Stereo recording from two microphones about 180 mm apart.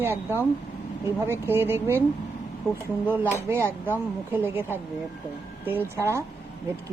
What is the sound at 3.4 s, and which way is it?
Speech, 15° right (ahead or behind).